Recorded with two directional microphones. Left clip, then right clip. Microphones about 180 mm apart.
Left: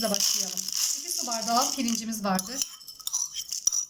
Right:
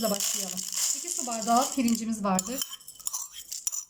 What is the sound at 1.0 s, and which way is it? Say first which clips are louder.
Speech: even; 20° right (ahead or behind).